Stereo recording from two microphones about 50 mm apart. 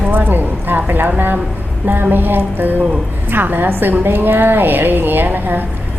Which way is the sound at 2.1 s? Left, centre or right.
Right.